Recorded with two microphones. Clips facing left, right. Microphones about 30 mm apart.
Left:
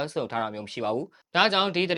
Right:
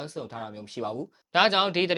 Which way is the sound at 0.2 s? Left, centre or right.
Left.